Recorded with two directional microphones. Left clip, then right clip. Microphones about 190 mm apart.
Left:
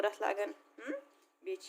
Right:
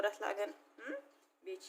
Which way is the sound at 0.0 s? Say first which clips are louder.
Left 3 dB; 40° left (ahead or behind).